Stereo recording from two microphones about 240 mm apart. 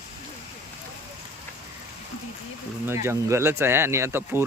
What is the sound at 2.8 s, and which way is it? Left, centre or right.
Speech, centre.